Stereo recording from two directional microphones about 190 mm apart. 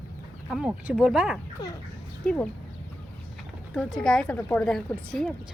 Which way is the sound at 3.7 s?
5° left (ahead or behind).